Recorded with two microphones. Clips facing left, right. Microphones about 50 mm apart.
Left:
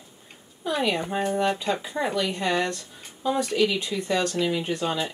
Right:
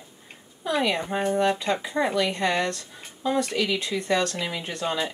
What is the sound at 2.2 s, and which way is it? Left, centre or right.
Speech, right.